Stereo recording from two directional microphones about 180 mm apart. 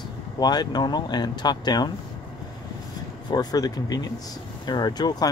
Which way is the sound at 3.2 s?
20° left (ahead or behind).